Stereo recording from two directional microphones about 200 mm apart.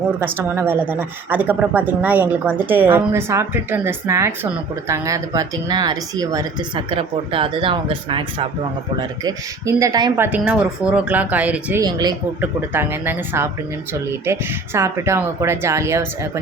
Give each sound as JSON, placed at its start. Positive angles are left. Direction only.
{"t": 0.2, "sound": "a woman's voice", "side_deg": -10}
{"t": 10.3, "sound": "a woman's voice", "side_deg": -5}
{"t": 11.8, "sound": "a woman's voice", "side_deg": -20}